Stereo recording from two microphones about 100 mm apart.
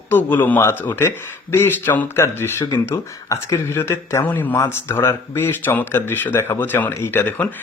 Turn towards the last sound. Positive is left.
turn(degrees=20)  # may be behind; listen again after turning